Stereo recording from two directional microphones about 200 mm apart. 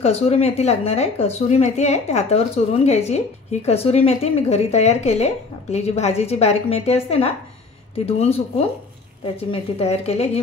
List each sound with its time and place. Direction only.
0.0 s speech: 30° left (ahead or behind)